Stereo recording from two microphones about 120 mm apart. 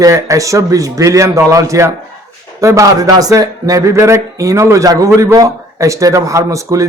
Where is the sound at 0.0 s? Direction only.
25° right (ahead or behind).